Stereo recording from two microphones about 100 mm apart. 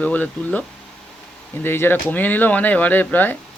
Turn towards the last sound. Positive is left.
turn(degrees=20)  # may be behind; listen again after turning